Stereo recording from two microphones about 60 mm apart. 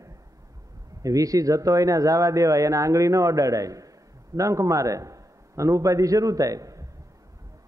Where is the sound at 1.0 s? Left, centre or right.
Right.